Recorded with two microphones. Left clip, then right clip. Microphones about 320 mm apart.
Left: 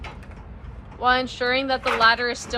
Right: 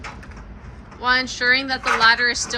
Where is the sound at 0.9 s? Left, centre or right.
Centre.